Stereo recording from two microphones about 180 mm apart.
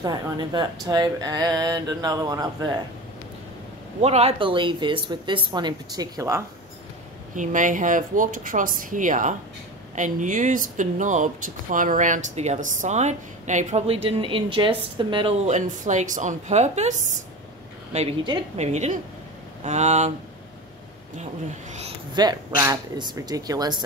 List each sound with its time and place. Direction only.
0.0 s speech: 25° right (ahead or behind)
4.0 s speech: 35° right (ahead or behind); by 6.4 s 20° right (ahead or behind)
7.3 s speech: 45° right (ahead or behind); by 15.3 s 25° right (ahead or behind)
15.4 s a woman's voice: 40° right (ahead or behind)
17.9 s speech: 30° right (ahead or behind)
18.6 s a woman's voice: 40° right (ahead or behind)
22.1 s speech: 25° right (ahead or behind)